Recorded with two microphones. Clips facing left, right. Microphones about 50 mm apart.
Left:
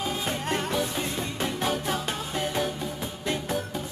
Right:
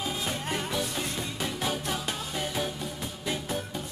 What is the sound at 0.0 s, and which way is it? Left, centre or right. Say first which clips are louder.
Music: left 3 dB; centre.